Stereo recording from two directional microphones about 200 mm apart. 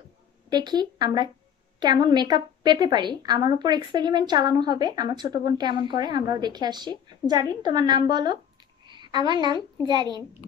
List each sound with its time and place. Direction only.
0.5 s a woman's voice: 20° right (ahead or behind)